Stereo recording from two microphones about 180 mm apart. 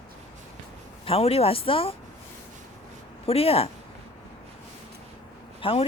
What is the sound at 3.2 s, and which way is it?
Speech, 35° left (ahead or behind).